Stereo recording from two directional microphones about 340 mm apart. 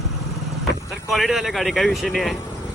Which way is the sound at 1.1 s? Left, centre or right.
Centre.